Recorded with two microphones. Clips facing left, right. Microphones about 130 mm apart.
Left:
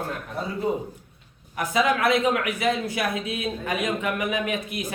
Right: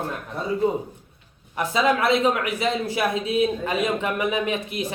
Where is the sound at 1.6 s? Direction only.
30° right (ahead or behind).